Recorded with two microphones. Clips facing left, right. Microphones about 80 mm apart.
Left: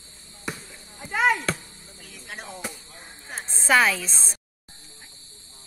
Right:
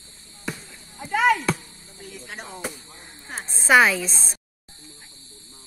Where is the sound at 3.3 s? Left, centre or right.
Centre.